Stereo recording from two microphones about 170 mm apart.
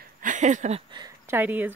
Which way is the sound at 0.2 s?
45° right (ahead or behind).